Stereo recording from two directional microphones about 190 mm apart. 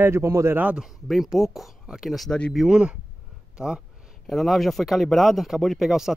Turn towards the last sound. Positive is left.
turn(degrees=0)  # may be behind; listen again after turning